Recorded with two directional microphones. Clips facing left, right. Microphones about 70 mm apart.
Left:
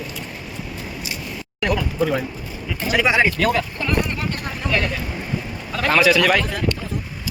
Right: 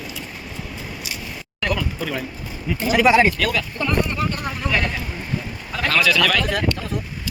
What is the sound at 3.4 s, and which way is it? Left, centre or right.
Speech, left.